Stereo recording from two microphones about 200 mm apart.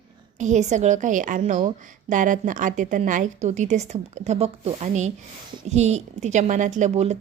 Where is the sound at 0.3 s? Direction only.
35° right (ahead or behind).